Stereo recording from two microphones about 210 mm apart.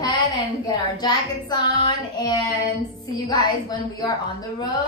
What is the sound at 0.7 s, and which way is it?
Child singing, 20° left (ahead or behind).